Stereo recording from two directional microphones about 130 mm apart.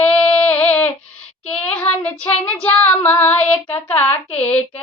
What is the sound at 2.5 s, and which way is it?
Female singing, 10° left (ahead or behind).